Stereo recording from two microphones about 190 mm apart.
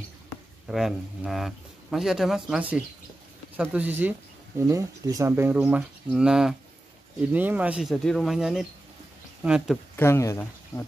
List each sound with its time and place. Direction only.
0.7 s speech: centre (ahead or behind)
9.9 s speech: 15° left (ahead or behind)